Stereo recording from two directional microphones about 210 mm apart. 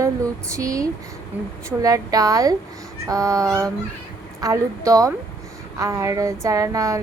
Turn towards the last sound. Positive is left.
turn(degrees=-15)  # may be behind; listen again after turning